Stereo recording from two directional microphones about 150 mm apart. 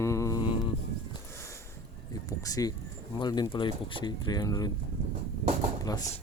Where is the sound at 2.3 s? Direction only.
25° left (ahead or behind).